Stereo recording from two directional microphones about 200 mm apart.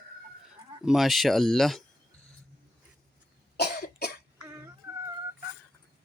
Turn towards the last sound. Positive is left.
turn(degrees=-15)  # may be behind; listen again after turning